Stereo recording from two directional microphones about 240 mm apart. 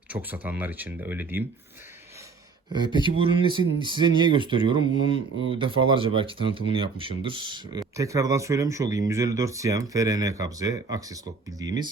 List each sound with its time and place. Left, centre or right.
0.1 s speech: centre
2.7 s speech: centre